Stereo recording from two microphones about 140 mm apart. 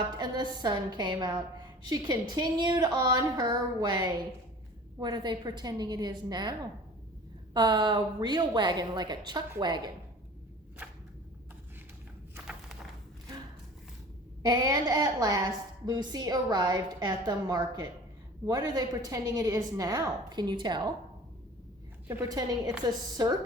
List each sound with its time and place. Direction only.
0.2 s a woman's voice: 30° right (ahead or behind)
7.5 s a woman's voice: 30° right (ahead or behind)
12.3 s a sound: 5° right (ahead or behind)
14.4 s a woman's voice: 25° right (ahead or behind)
22.0 s a woman's voice: 15° right (ahead or behind)
22.3 s a woman's voice: 25° right (ahead or behind)